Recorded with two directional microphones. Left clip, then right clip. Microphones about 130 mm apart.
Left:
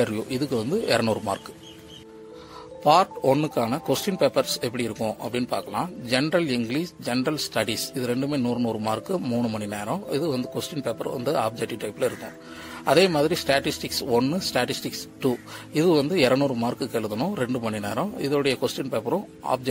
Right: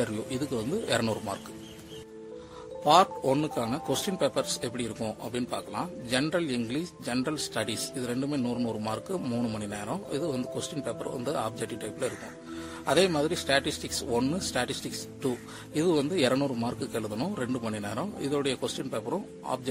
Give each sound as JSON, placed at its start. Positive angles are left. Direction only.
{"t": 0.0, "sound": "a man's voice", "side_deg": 35}
{"t": 2.8, "sound": "a man's voice", "side_deg": 35}
{"t": 9.2, "sound": "a man's voice", "side_deg": 25}
{"t": 9.7, "sound": "a man's voice", "side_deg": 40}
{"t": 16.3, "sound": "a man's voice", "side_deg": 25}
{"t": 16.6, "sound": "a man's voice", "side_deg": 40}